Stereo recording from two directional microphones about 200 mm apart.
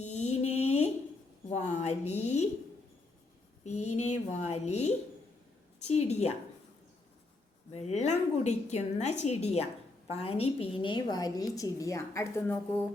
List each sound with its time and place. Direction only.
0.0 s a sound: 35° left (ahead or behind)
1.6 s a woman's voice: 35° left (ahead or behind)
3.6 s a woman's voice: 35° left (ahead or behind)
7.7 s a woman's voice: 35° left (ahead or behind); by 12.8 s 10° left (ahead or behind)